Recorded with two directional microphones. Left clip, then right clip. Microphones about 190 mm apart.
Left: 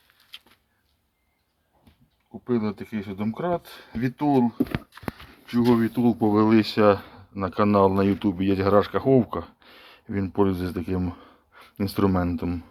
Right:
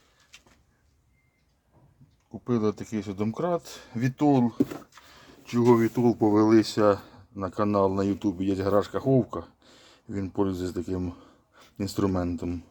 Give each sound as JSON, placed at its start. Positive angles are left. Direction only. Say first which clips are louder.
{"t": 2.5, "sound": "speech", "louder": "even", "side_deg": -35}
{"t": 4.9, "sound": "a sound", "louder": "left 16 dB", "side_deg": 35}
{"t": 5.5, "sound": "speech", "louder": "right 1 dB", "side_deg": -15}